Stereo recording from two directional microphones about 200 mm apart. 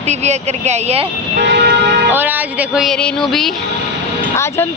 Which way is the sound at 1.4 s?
60° right (ahead or behind).